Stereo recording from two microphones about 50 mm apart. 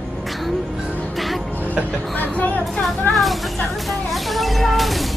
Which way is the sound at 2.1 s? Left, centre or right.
Left.